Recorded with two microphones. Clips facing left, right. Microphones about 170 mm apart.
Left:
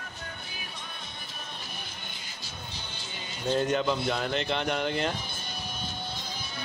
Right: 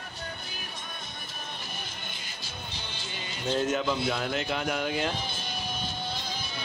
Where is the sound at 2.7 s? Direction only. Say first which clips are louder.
Right 2 dB; 90° right.